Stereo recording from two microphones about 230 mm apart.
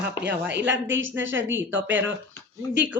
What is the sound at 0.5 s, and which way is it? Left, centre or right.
A woman's voice, right.